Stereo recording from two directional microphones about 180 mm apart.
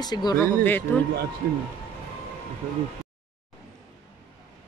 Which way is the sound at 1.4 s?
60° right (ahead or behind).